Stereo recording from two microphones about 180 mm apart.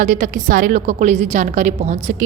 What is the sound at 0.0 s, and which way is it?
A woman's voice, 45° right (ahead or behind).